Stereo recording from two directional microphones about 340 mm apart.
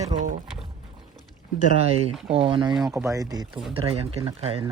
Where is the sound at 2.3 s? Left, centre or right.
Centre.